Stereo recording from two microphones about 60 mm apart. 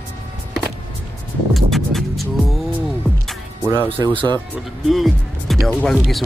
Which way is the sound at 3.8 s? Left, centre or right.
Left.